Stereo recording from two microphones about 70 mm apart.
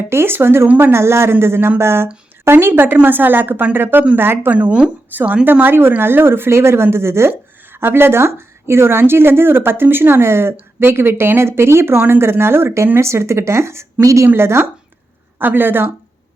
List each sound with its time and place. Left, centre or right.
0.1 s speech: right
4.5 s speech: centre; by 14.3 s right
14.3 s speech: right